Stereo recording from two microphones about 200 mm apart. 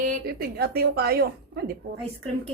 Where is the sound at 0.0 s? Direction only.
45° right (ahead or behind).